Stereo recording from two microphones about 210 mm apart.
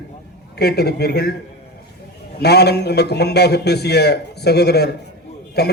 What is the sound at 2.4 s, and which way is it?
A man's voice, 50° left (ahead or behind).